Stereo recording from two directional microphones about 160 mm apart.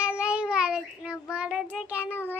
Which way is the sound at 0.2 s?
5° right (ahead or behind).